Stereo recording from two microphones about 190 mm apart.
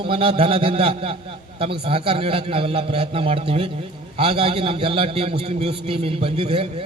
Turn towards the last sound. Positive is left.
turn(degrees=-30)  # may be behind; listen again after turning